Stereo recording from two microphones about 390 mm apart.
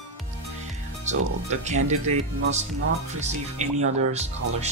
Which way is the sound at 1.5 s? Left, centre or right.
Centre.